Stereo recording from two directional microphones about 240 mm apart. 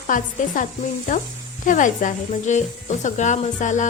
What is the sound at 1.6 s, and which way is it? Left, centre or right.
Speech, left.